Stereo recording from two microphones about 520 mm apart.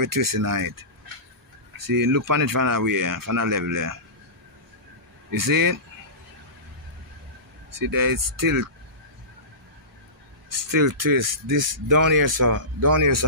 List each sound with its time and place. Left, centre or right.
0.0 s speech: right
1.9 s speech: right
5.3 s speech: right
7.8 s speech: right
10.7 s speech: right